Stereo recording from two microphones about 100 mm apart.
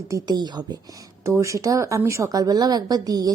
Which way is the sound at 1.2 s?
30° right (ahead or behind).